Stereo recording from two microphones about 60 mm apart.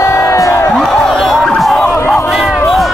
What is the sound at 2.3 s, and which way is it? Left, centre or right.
Crowd, centre.